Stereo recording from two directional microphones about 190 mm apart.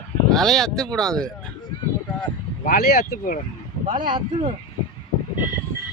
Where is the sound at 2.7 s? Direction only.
50° left (ahead or behind).